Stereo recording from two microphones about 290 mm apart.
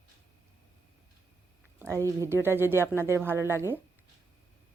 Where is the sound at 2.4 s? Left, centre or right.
Centre.